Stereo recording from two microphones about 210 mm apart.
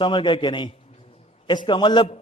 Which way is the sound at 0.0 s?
25° left (ahead or behind).